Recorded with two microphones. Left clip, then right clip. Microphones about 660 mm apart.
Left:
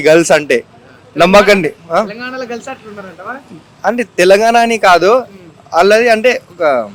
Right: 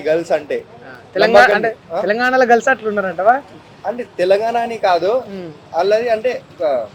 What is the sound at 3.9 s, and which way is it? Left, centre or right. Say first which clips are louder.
A man's voice: left 6 dB; left.